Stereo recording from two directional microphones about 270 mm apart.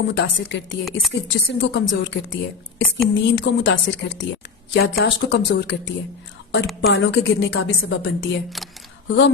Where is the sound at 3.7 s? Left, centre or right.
Left.